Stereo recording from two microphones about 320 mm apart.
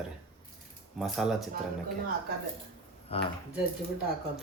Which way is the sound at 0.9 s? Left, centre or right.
Centre.